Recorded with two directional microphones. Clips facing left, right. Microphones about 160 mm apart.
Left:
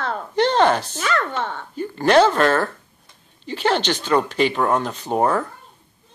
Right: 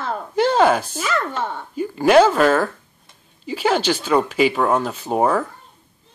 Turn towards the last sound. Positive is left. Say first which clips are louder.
# right 1 dB
turn(degrees=-5)  # may be behind; listen again after turning